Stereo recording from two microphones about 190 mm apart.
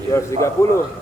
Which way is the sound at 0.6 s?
15° left (ahead or behind).